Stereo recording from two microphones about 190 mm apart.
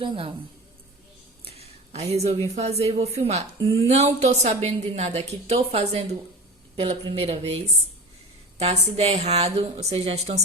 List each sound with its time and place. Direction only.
0.0 s a woman's voice: 30° right (ahead or behind)
1.5 s a sound: 30° right (ahead or behind)
2.6 s speech: 35° right (ahead or behind)